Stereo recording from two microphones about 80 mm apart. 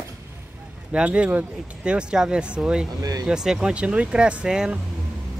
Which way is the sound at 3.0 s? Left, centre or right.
Right.